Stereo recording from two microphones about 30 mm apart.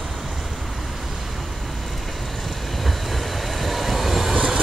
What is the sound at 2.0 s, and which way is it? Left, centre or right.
Train, centre.